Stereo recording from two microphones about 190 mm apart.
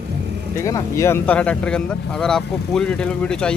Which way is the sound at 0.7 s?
15° left (ahead or behind).